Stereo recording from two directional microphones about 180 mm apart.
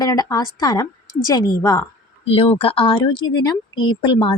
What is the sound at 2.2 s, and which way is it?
Speech, 30° left (ahead or behind).